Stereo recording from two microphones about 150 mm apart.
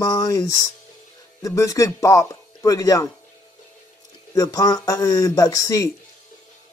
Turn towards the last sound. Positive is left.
turn(degrees=20)  # may be behind; listen again after turning